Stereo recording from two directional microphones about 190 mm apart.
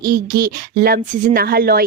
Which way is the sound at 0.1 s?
50° right (ahead or behind).